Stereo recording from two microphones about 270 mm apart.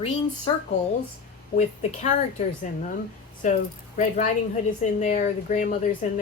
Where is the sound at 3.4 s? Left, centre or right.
Left.